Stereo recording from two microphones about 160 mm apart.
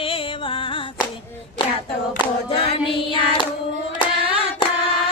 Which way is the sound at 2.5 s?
35° left (ahead or behind).